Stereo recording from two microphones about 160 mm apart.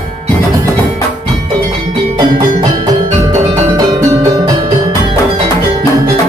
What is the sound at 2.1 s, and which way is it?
Music, 25° right (ahead or behind).